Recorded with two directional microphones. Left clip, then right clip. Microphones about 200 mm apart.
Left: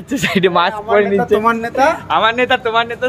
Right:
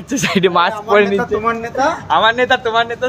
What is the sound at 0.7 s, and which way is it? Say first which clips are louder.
Speech: right 1 dB; 15° right (ahead or behind).